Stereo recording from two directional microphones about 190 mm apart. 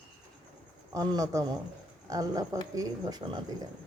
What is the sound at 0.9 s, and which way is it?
Speech, 20° right (ahead or behind).